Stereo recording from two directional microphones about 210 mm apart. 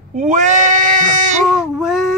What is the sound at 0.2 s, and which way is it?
Bleat, 35° right (ahead or behind).